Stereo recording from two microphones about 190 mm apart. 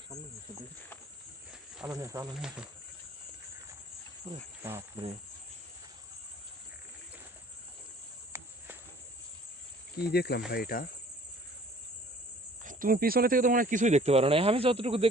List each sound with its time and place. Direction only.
1.9 s speech: 15° right (ahead or behind)
4.6 s speech: 15° right (ahead or behind)
8.3 s a sound: 15° right (ahead or behind)
10.0 s speech: 55° left (ahead or behind)
12.6 s speech: 45° right (ahead or behind); by 15.0 s 30° right (ahead or behind)